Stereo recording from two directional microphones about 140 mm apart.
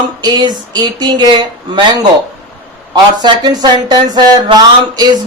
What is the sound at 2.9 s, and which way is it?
A woman's voice, 30° right (ahead or behind).